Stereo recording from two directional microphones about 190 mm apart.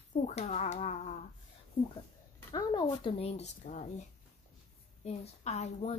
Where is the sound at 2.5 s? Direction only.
25° left (ahead or behind).